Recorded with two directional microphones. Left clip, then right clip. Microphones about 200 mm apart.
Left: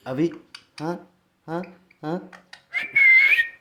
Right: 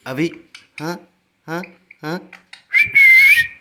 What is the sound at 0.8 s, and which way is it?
Speech, 25° right (ahead or behind).